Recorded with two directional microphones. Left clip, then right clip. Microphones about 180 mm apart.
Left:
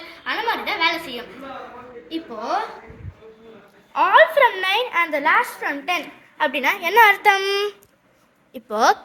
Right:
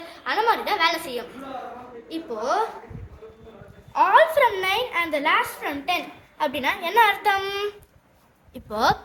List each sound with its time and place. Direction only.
0.1 s a sound: 20° right (ahead or behind)
3.9 s a woman's voice: 5° left (ahead or behind); by 6.0 s 20° left (ahead or behind)
6.3 s a woman's voice: 10° left (ahead or behind)
6.7 s a child's voice: 20° left (ahead or behind)